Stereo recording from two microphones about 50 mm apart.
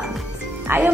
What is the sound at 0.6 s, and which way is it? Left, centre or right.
Speech, right.